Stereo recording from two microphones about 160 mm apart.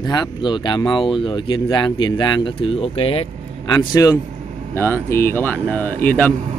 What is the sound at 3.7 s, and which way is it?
Speech, 20° left (ahead or behind).